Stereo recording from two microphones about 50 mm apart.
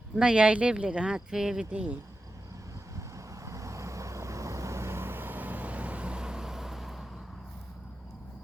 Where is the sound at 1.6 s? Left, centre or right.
Right.